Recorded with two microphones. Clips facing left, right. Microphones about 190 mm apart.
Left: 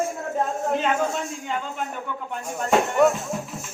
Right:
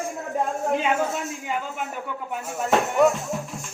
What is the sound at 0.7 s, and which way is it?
Speech, 10° right (ahead or behind).